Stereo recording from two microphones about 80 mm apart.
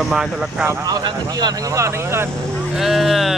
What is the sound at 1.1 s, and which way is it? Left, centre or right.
Speech, right.